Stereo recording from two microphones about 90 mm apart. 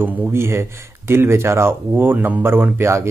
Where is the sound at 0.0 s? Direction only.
25° right (ahead or behind).